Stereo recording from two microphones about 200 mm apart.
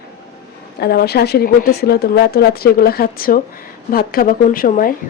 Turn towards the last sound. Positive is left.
turn(degrees=45)  # may be behind; listen again after turning